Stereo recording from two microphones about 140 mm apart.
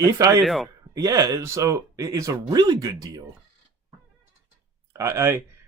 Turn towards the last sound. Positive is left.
turn(degrees=-20)  # may be behind; listen again after turning